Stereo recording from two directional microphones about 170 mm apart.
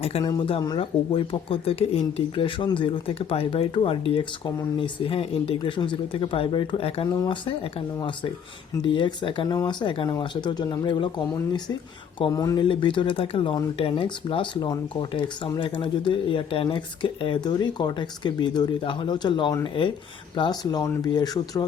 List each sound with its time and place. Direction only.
0.0 s speech: 35° left (ahead or behind)
12.3 s speech: 20° left (ahead or behind)